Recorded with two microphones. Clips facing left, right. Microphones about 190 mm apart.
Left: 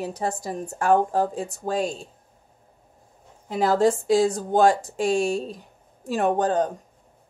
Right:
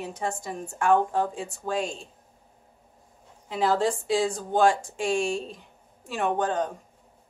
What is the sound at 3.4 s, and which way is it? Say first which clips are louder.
Speech: left 4 dB; 45° left (ahead or behind).